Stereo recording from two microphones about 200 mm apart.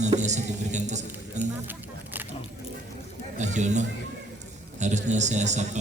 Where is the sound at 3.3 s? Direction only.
35° right (ahead or behind).